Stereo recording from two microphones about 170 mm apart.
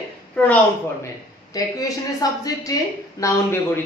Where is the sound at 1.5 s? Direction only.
20° left (ahead or behind).